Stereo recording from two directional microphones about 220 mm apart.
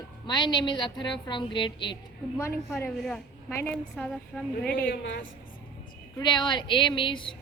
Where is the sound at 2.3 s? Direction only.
10° left (ahead or behind).